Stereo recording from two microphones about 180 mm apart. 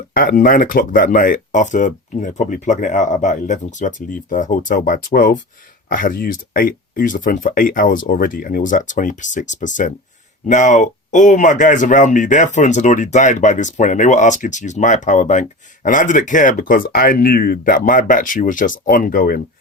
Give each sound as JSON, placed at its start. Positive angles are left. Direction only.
{"t": 0.1, "sound": "speech", "side_deg": 55}